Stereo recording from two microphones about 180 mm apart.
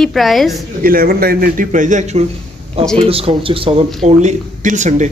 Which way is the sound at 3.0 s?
30° right (ahead or behind).